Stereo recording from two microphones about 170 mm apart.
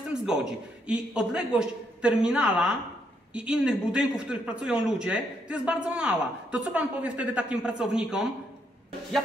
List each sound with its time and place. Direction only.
0.1 s a man's voice: 5° right (ahead or behind)